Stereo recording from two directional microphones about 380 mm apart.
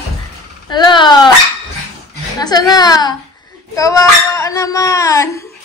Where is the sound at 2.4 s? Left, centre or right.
Centre.